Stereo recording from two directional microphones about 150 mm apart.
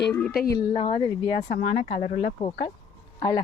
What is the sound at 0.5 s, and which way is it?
Speech, 30° left (ahead or behind).